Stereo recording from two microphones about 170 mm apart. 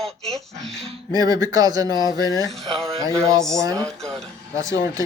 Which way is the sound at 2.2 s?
20° left (ahead or behind).